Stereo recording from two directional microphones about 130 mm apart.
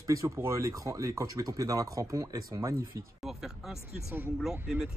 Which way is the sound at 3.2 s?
Centre (ahead or behind).